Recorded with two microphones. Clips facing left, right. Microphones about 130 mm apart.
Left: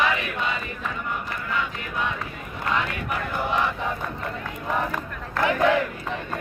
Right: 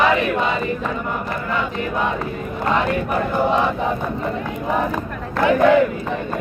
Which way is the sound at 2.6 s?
35° right (ahead or behind).